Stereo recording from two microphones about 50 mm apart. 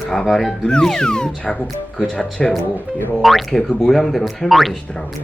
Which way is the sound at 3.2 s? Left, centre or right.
Centre.